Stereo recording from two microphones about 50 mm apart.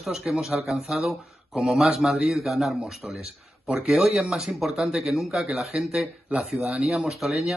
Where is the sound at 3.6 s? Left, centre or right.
Right.